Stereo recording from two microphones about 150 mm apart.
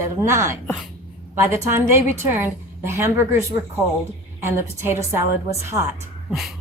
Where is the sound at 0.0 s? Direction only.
20° right (ahead or behind).